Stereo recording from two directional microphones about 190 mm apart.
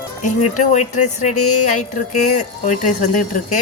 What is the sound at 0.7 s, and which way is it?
Speech, 40° left (ahead or behind).